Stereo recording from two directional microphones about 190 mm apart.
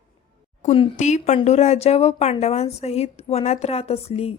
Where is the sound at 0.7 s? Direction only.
35° left (ahead or behind).